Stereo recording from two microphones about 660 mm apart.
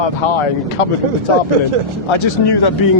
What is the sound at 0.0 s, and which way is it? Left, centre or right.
Speech, left.